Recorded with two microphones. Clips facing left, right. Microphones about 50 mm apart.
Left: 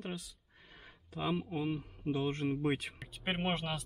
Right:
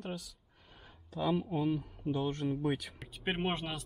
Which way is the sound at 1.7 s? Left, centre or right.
Left.